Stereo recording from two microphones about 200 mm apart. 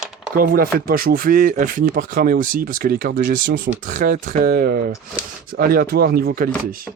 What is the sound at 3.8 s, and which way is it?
Speech, 40° right (ahead or behind).